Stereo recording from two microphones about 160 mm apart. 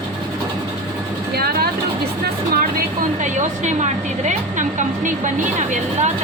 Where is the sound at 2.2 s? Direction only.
65° right (ahead or behind); by 4.6 s 50° right (ahead or behind).